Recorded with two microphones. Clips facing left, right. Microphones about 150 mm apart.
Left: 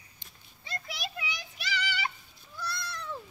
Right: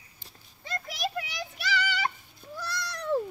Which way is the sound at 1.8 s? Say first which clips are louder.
Right 4 dB; 45° right (ahead or behind).